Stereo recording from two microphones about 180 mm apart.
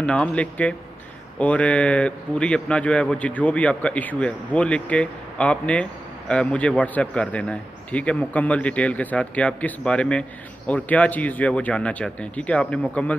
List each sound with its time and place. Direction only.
0.0 s a man's voice: 5° left (ahead or behind)